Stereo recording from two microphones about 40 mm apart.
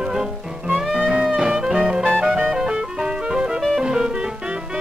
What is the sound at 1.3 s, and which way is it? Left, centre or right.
Music, centre.